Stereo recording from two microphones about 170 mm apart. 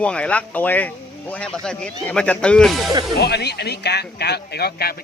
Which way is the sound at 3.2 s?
75° left (ahead or behind).